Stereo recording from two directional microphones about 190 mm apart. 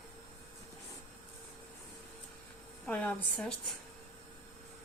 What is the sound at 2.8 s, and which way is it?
Speech, 5° left (ahead or behind).